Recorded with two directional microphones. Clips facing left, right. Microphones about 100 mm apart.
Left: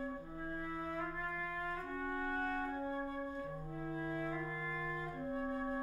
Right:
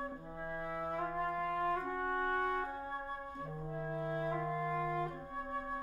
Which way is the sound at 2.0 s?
65° right (ahead or behind).